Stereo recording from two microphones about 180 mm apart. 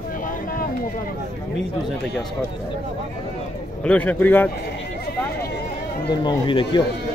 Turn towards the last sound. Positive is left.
turn(degrees=25)  # may be behind; listen again after turning